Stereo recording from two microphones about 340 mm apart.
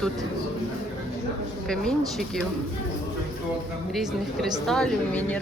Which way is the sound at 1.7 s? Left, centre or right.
Centre.